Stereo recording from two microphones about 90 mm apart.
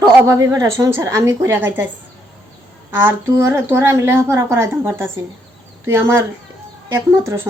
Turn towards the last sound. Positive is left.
turn(degrees=-30)  # may be behind; listen again after turning